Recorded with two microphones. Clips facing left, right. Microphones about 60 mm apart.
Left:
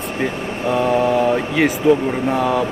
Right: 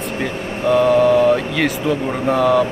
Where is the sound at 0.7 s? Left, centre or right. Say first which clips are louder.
Right 4 dB; centre.